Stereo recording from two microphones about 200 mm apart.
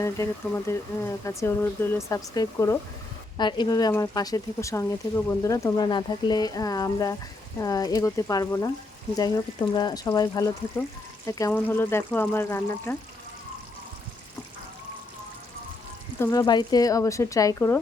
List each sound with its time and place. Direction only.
0.0 s speech: 15° left (ahead or behind)
16.2 s speech: 15° left (ahead or behind)